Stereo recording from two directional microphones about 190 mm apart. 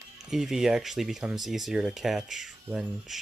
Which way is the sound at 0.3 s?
Centre (ahead or behind).